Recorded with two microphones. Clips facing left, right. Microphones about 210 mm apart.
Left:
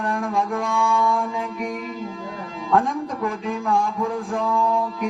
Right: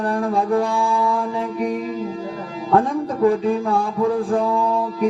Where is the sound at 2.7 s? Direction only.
35° right (ahead or behind).